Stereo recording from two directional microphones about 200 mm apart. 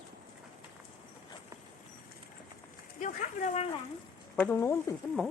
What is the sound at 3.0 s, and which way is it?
Speech, 40° left (ahead or behind).